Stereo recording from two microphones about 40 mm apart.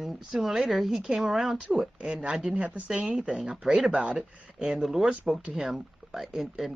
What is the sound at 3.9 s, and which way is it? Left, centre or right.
Speech, right.